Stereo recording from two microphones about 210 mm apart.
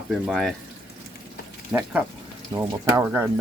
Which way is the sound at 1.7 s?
10° right (ahead or behind).